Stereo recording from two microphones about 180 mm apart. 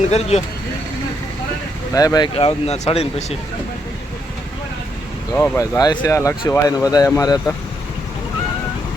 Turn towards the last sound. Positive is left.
turn(degrees=15)  # may be behind; listen again after turning